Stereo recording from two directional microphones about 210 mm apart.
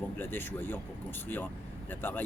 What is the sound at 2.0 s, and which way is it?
Speech, 10° left (ahead or behind).